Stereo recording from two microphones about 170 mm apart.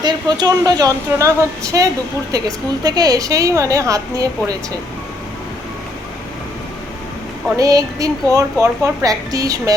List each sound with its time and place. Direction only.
0.0 s a woman's voice: 25° right (ahead or behind)
7.5 s a woman's voice: 20° right (ahead or behind)